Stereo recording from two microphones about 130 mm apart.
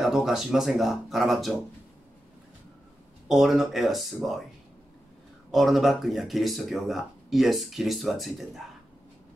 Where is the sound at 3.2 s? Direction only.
Centre (ahead or behind).